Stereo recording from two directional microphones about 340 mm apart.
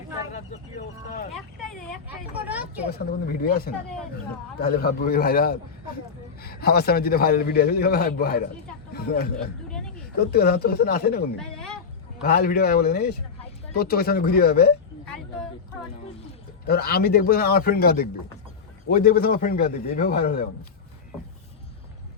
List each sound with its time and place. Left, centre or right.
2.4 s speech: centre
3.0 s a man's voice: left
11.3 s a sound: centre
12.2 s a man's voice: left
16.6 s a man's voice: left